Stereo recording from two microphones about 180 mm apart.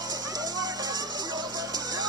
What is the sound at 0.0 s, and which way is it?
Music, 20° right (ahead or behind).